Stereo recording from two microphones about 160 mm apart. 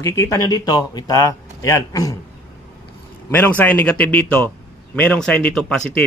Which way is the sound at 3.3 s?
10° left (ahead or behind).